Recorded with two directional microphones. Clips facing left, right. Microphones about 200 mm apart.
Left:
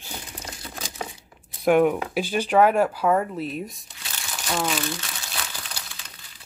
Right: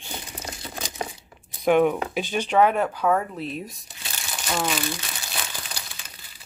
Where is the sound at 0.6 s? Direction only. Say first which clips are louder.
Right 2 dB; 10° right (ahead or behind).